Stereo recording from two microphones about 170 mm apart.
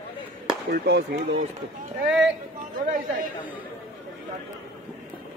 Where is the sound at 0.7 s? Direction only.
80° right.